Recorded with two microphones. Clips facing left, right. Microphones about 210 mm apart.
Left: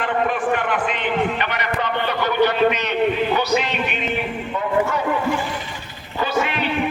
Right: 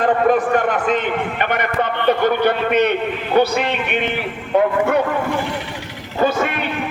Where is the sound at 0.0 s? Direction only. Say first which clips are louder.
Right 6 dB; 40° right (ahead or behind); by 5.0 s 60° right (ahead or behind).